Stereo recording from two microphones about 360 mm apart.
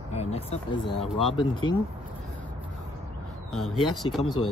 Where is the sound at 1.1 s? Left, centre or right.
Centre.